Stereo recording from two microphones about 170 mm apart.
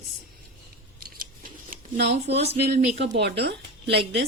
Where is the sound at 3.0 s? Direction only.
85° right.